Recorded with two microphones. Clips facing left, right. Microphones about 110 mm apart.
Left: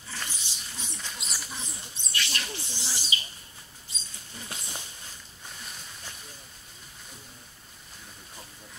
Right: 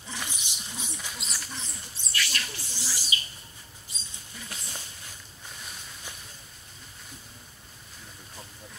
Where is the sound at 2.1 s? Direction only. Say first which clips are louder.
Right 1 dB; 25° left (ahead or behind).